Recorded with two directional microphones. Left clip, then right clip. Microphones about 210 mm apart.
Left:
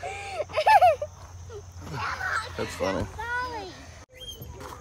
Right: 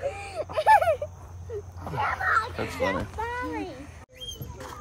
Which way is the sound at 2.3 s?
10° right (ahead or behind).